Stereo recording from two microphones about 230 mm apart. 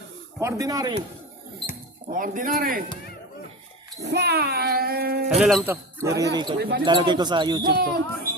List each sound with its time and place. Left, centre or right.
0.3 s speech: centre
2.0 s speech: right
4.0 s child singing: right
5.3 s speech: centre; by 6.6 s right
6.6 s child singing: right
6.8 s speech: centre